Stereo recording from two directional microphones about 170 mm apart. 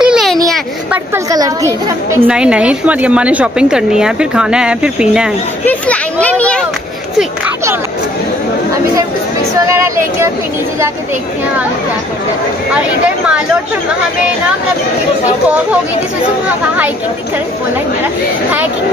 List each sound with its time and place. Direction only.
0.0 s a sound: centre (ahead or behind)
1.1 s a woman's voice: 20° right (ahead or behind)
2.1 s a woman's voice: 5° right (ahead or behind)
5.7 s speech: 10° left (ahead or behind)
9.7 s a woman's voice: 15° right (ahead or behind)